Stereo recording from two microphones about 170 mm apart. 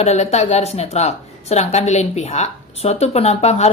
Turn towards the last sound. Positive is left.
turn(degrees=40)  # may be behind; listen again after turning